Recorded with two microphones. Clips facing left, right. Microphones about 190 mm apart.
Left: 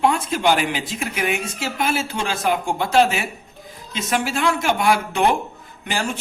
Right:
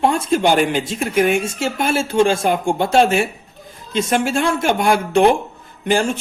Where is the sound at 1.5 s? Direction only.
25° right (ahead or behind).